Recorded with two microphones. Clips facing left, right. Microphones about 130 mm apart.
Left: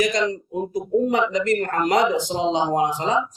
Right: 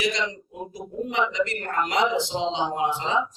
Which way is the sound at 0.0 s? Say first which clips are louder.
Left 6 dB; 45° left (ahead or behind).